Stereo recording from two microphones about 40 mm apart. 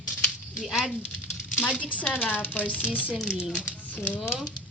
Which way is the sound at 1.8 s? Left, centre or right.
Left.